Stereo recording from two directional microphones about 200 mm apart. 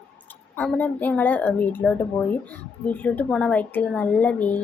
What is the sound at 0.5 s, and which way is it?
A woman's voice, 5° left (ahead or behind).